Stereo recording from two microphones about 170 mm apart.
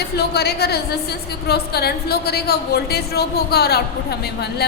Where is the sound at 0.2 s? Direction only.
70° left (ahead or behind).